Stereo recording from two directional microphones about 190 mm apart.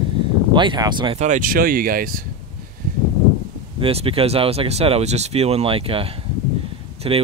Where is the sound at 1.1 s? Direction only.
40° right (ahead or behind).